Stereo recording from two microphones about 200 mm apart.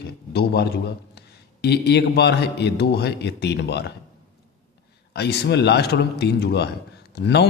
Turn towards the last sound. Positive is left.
turn(degrees=55)  # may be behind; listen again after turning